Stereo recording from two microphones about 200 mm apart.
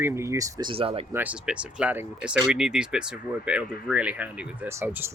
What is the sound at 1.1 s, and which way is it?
Speech, 10° right (ahead or behind).